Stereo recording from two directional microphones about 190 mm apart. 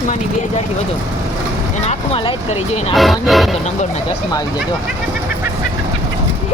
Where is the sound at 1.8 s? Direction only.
30° left (ahead or behind).